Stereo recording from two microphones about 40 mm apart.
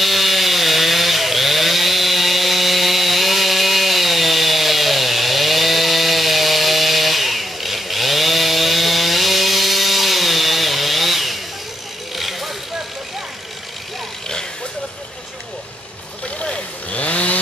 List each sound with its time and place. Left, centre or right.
0.0 s chainsaw: centre
12.2 s vehicle: centre
16.3 s chainsaw: left